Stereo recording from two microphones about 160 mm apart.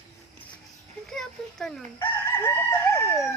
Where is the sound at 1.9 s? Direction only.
15° left (ahead or behind).